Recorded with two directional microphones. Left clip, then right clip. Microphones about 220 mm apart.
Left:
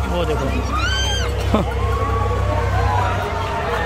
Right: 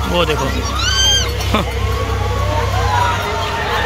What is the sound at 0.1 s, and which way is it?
Speech, 5° left (ahead or behind).